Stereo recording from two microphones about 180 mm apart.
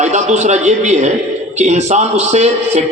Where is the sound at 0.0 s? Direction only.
40° right (ahead or behind).